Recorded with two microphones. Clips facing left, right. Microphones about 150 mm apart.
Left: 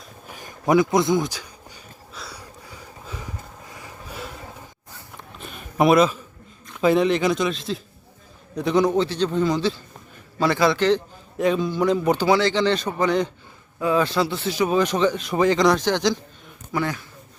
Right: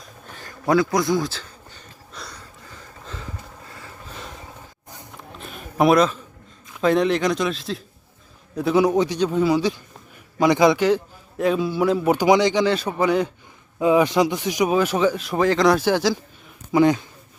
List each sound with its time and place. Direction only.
0.3 s a sound: 15° left (ahead or behind)
6.7 s a man's voice: centre (ahead or behind)
13.7 s a man's voice: 20° right (ahead or behind)
16.7 s speech: 20° right (ahead or behind)